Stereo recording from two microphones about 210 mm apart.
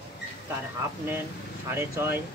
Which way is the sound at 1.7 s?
10° right (ahead or behind).